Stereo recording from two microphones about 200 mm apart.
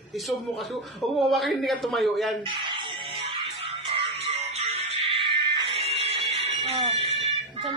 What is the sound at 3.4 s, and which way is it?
Music, 25° right (ahead or behind).